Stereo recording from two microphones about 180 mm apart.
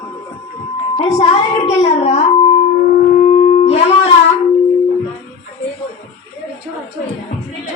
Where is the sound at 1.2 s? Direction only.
35° left (ahead or behind).